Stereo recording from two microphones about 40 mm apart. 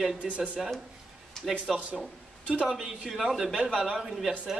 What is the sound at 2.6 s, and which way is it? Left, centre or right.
Speech, centre.